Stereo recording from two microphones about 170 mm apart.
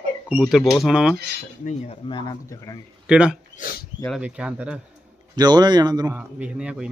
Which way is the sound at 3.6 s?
60° left (ahead or behind).